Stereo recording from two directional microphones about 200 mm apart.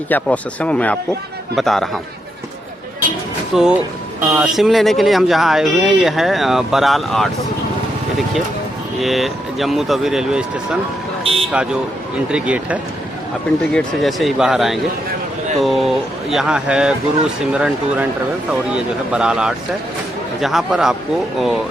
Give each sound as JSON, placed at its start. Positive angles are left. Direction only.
{"t": 0.1, "sound": "speech", "side_deg": 5}
{"t": 3.5, "sound": "speech", "side_deg": -5}
{"t": 9.0, "sound": "speech", "side_deg": 0}
{"t": 19.1, "sound": "speech", "side_deg": -5}